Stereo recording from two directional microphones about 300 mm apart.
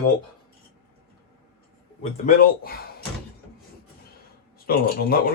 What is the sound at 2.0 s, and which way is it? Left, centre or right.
Speech, left.